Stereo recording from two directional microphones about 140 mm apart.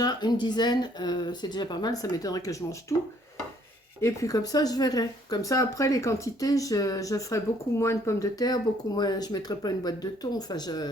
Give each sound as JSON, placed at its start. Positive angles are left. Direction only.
{"t": 0.0, "sound": "speech", "side_deg": 30}